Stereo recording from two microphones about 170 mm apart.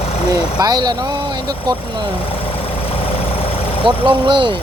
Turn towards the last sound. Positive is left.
turn(degrees=-30)  # may be behind; listen again after turning